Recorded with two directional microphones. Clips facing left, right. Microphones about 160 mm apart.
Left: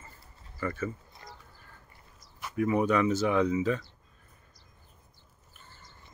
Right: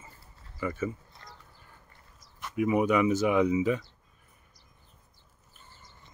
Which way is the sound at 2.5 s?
10° right (ahead or behind).